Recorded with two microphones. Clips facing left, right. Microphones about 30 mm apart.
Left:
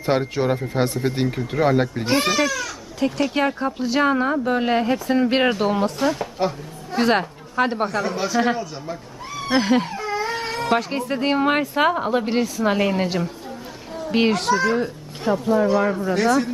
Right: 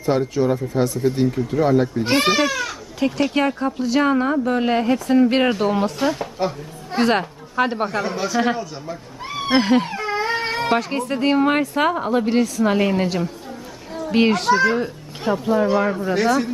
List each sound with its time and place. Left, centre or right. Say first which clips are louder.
0.0 s speech: right 2 dB; left
2.0 s speech: right 1 dB; centre
3.0 s a woman's voice: right 2 dB; centre
3.4 s a woman's voice: right 1 dB; centre
8.1 s a woman's voice: even; centre
9.9 s baby cry: right 2 dB; right
10.3 s a sound: right 3 dB; right
10.8 s a woman's voice: right 1 dB; centre
14.1 s a woman's voice: right 2 dB; centre